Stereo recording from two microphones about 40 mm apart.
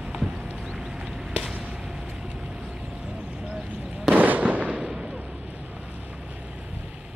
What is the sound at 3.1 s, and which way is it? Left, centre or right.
Vehicle, right.